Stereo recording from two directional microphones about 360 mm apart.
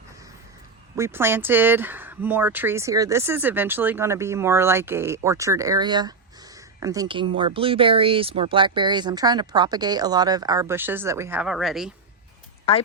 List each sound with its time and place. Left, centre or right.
0.9 s speech: centre
12.7 s speech: centre